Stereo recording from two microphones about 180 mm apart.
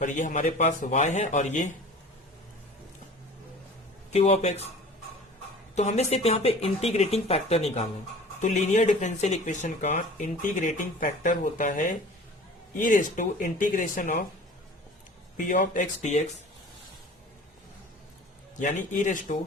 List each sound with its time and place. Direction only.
0.0 s speech: 45° left (ahead or behind)
4.1 s speech: 35° left (ahead or behind)
5.7 s speech: 40° left (ahead or behind)
15.4 s speech: 45° left (ahead or behind)
18.6 s speech: 45° left (ahead or behind)